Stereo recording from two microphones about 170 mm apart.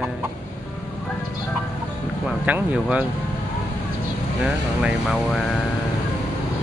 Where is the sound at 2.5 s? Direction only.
10° right (ahead or behind).